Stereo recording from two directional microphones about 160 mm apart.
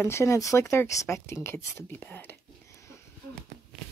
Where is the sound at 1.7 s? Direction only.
15° left (ahead or behind).